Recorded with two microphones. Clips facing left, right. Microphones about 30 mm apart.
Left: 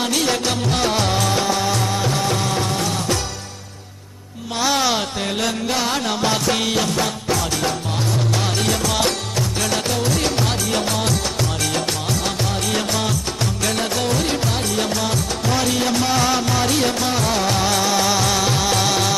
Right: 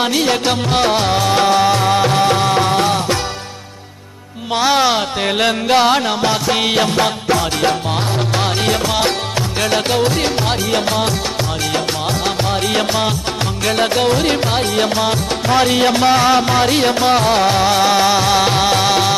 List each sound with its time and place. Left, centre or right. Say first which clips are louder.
0.1 s music: right 4 dB; right
1.4 s music: right 7 dB; right
4.6 s music: right 5 dB; right
5.4 s music: right 9 dB; right
6.0 s music: right 3 dB; centre
6.7 s music: right 5 dB; right
8.6 s music: right 4 dB; right
12.7 s music: right 5 dB; right